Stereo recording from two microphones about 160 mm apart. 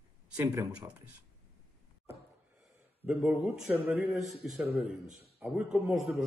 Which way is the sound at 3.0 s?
5° right (ahead or behind).